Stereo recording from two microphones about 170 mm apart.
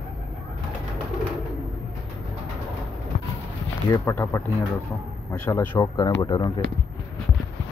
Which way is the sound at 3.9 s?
15° left (ahead or behind).